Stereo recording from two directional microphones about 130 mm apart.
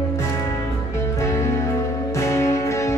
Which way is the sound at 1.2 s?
20° left (ahead or behind).